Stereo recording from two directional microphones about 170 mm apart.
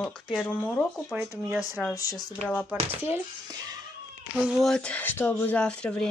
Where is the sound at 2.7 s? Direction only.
10° right (ahead or behind).